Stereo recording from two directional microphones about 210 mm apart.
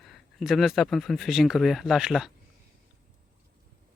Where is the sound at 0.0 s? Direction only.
Centre (ahead or behind).